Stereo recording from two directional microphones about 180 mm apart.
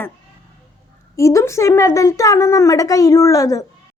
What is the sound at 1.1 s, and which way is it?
A woman's voice, 15° left (ahead or behind).